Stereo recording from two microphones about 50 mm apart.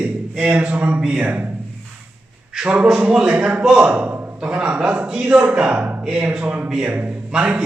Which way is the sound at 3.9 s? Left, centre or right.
Right.